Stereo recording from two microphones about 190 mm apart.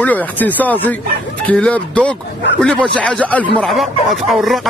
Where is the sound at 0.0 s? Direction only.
10° left (ahead or behind).